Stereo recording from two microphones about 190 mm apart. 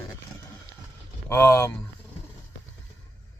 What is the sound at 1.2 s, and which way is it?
Speech, 15° left (ahead or behind).